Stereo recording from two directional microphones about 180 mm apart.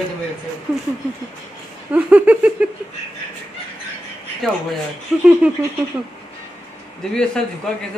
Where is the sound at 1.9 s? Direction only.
10° right (ahead or behind).